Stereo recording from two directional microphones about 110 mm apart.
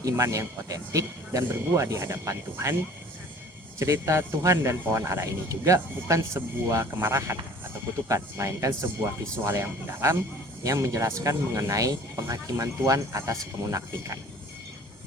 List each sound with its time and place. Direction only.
0.0 s speech: 30° right (ahead or behind)
3.8 s speech: 25° right (ahead or behind)